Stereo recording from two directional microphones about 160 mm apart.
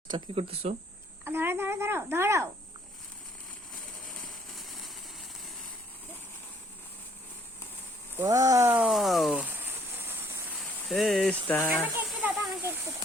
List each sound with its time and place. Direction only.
0.1 s speech: 35° right (ahead or behind)
1.2 s a child's voice: 15° right (ahead or behind)
4.5 s a sound: centre (ahead or behind)
8.1 s speech: 20° right (ahead or behind)
10.8 s speech: centre (ahead or behind)
11.7 s a sound: 5° right (ahead or behind)